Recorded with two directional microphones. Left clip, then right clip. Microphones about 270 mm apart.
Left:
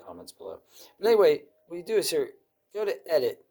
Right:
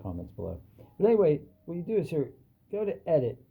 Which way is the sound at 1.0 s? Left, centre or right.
Left.